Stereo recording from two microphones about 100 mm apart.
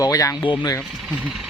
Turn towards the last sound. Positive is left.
turn(degrees=40)  # may be behind; listen again after turning